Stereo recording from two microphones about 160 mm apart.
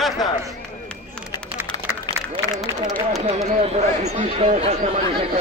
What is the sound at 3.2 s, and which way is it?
Speech, 40° right (ahead or behind).